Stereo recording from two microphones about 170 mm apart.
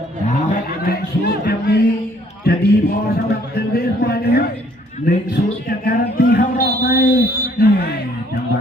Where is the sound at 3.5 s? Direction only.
65° left (ahead or behind).